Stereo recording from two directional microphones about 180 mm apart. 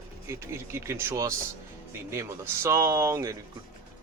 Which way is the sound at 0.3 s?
15° right (ahead or behind).